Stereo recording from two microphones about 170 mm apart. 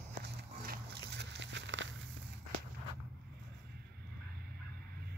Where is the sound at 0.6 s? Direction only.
80° right.